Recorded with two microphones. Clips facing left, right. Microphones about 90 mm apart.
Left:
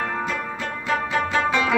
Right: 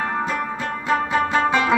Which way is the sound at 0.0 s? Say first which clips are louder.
Right 3 dB; 15° right (ahead or behind).